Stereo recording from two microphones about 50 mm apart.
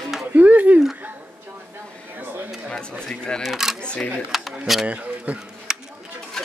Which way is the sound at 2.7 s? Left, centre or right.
Left.